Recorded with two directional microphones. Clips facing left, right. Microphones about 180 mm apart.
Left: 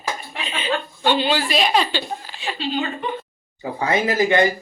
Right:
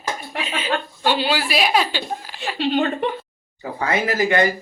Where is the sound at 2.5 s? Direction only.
60° right (ahead or behind).